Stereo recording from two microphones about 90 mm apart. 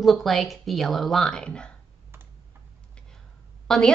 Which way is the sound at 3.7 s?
5° left (ahead or behind).